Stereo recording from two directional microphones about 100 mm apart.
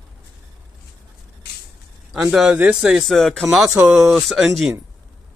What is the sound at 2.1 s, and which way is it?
Speech, 5° right (ahead or behind).